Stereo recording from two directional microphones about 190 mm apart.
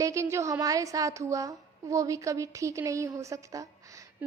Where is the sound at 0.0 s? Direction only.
15° right (ahead or behind).